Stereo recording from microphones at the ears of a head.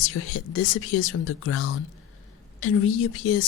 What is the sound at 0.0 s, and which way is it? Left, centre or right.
Speech, left.